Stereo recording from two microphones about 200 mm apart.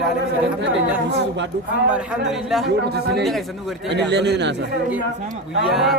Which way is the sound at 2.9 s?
55° right (ahead or behind).